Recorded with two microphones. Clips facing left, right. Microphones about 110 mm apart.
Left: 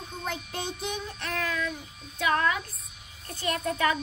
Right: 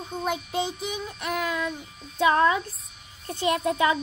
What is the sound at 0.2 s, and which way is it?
Child singing, 10° right (ahead or behind).